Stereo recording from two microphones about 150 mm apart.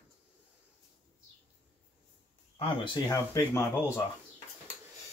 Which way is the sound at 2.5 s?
35° left (ahead or behind).